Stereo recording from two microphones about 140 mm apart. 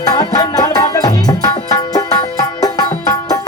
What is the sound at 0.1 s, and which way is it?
Music, 25° left (ahead or behind).